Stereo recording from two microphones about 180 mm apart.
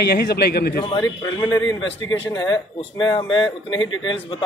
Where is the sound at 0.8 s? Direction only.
20° left (ahead or behind).